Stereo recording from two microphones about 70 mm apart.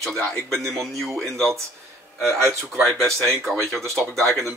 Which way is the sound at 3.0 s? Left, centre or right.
Centre.